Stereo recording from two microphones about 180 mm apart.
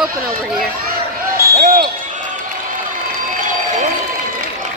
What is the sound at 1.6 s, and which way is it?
Basketball bounce, 45° right (ahead or behind).